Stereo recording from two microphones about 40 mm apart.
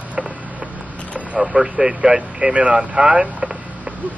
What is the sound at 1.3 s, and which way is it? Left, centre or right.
Speech, centre.